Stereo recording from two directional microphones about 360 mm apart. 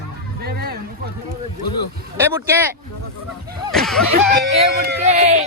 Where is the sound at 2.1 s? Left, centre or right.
Centre.